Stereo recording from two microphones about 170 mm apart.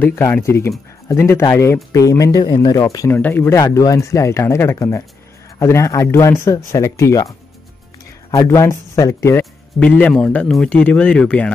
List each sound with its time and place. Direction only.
0.0 s a man's voice: 15° left (ahead or behind)
8.3 s a man's voice: 20° left (ahead or behind)